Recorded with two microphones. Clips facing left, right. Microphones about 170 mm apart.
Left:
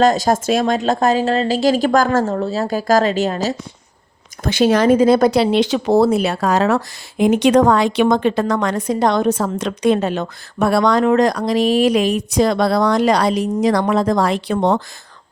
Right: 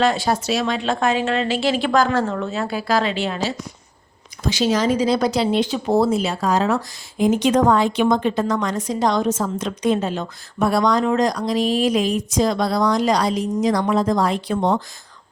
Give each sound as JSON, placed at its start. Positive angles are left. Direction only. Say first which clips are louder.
{"t": 0.0, "sound": "speech", "louder": "left 5 dB", "side_deg": 40}
{"t": 4.4, "sound": "speech", "louder": "left 5 dB", "side_deg": 55}